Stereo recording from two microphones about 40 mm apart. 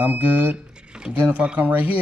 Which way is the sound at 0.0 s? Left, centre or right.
Right.